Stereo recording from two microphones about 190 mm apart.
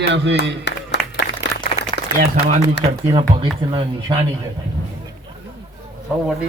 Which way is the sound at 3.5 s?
25° right (ahead or behind).